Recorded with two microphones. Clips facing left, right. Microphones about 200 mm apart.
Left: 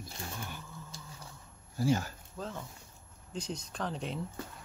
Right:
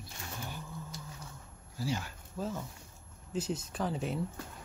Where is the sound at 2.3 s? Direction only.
5° right (ahead or behind).